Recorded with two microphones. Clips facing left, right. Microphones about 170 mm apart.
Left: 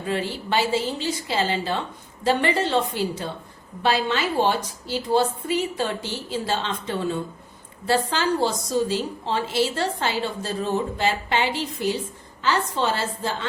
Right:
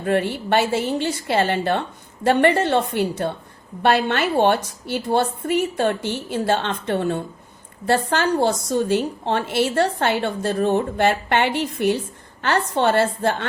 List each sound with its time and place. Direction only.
0.0 s a woman's voice: 60° right (ahead or behind)